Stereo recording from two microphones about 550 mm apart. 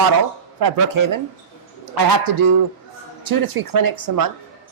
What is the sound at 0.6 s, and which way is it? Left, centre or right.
A man's voice, right.